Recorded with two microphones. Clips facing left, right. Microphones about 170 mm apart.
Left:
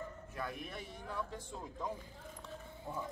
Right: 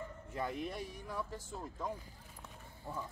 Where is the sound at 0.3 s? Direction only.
20° right (ahead or behind).